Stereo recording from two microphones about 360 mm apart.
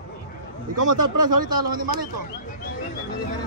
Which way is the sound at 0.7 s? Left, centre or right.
Right.